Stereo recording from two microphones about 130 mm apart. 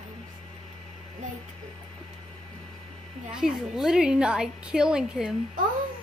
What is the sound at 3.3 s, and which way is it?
A woman's voice, 5° right (ahead or behind).